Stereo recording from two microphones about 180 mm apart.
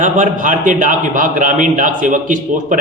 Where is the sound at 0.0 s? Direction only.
45° right (ahead or behind).